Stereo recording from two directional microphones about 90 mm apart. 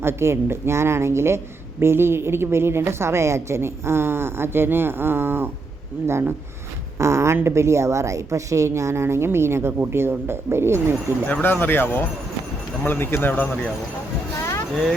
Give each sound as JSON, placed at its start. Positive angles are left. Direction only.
{"t": 0.0, "sound": "a woman's voice", "side_deg": -30}
{"t": 11.3, "sound": "speech", "side_deg": 20}